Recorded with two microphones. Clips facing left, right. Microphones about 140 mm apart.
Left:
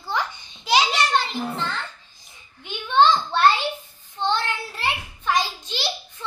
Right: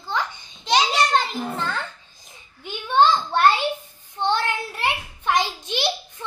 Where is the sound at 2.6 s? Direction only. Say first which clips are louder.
Even; 10° right (ahead or behind).